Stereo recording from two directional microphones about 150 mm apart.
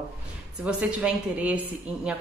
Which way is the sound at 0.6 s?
10° right (ahead or behind).